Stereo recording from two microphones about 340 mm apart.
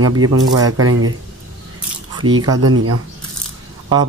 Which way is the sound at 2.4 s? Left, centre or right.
Right.